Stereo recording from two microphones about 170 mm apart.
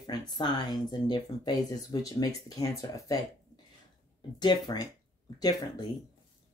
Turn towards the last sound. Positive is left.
turn(degrees=25)  # may be behind; listen again after turning